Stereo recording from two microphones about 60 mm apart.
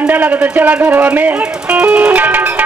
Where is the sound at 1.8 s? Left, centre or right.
Right.